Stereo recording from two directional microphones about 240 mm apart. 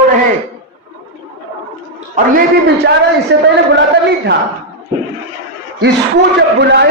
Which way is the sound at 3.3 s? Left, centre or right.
Right.